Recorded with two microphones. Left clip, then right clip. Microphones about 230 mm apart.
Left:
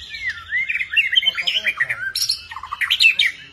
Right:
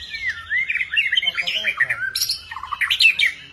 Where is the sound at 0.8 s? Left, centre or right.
Centre.